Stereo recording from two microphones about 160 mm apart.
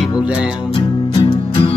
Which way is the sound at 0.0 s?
5° right (ahead or behind).